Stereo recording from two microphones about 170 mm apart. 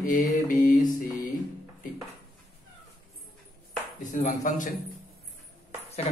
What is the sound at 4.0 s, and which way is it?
Speech, 50° left (ahead or behind).